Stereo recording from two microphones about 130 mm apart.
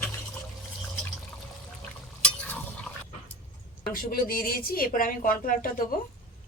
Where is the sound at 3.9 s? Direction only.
90° left.